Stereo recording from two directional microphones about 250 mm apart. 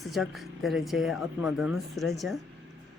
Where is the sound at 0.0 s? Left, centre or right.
Centre.